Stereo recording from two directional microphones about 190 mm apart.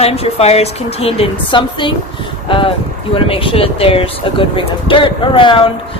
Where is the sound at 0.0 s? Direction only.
30° left (ahead or behind).